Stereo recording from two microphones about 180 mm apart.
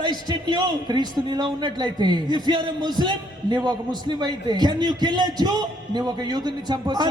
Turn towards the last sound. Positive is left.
turn(degrees=-25)  # may be behind; listen again after turning